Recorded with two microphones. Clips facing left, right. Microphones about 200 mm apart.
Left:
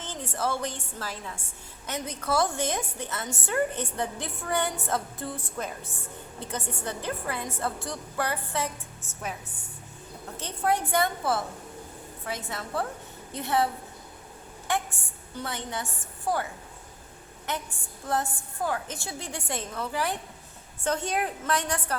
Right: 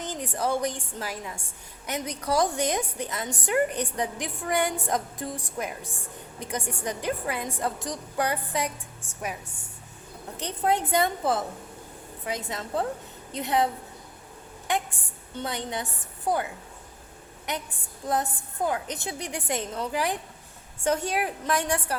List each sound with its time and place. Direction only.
0.0 s a woman's voice: 15° right (ahead or behind)
10.3 s a woman's voice: 20° right (ahead or behind)
14.7 s a woman's voice: 20° right (ahead or behind)
17.5 s a woman's voice: 15° right (ahead or behind)